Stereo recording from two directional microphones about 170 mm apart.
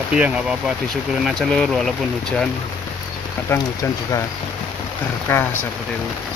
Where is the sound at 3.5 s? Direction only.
20° left (ahead or behind).